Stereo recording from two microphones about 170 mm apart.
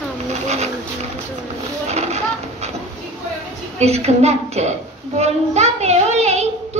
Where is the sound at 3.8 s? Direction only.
40° right (ahead or behind).